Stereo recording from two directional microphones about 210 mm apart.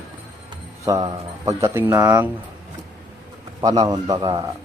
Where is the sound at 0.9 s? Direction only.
20° right (ahead or behind).